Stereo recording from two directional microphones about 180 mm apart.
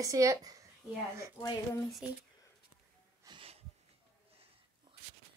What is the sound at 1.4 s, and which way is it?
Speech, 20° left (ahead or behind).